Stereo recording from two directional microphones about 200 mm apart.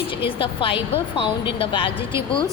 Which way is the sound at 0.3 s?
25° left (ahead or behind).